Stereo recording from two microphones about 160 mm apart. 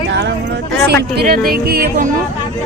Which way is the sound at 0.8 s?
85° right.